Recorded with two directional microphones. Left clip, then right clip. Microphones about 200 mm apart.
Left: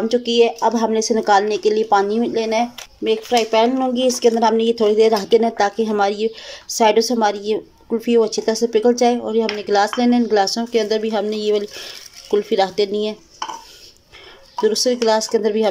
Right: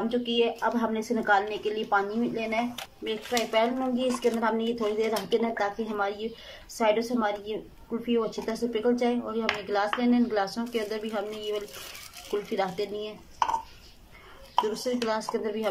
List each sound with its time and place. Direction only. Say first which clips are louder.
0.1 s speech: left 12 dB; 30° left (ahead or behind)
14.7 s speech: left 13 dB; 35° left (ahead or behind)